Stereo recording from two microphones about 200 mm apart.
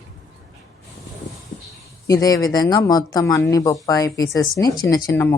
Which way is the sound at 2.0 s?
15° left (ahead or behind).